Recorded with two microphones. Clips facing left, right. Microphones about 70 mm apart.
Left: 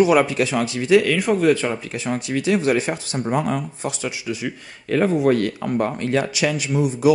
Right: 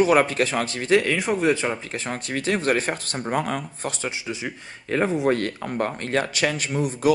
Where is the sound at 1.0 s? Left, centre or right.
Centre.